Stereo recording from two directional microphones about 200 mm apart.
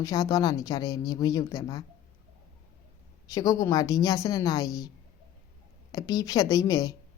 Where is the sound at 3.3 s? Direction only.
15° left (ahead or behind).